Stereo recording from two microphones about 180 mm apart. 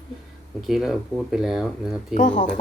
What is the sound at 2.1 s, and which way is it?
Speech, 45° left (ahead or behind).